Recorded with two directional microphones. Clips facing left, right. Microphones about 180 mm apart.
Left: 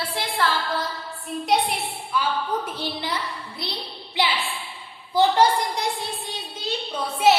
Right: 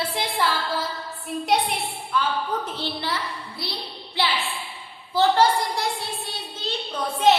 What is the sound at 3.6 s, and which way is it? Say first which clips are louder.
Music: even; 20° left (ahead or behind).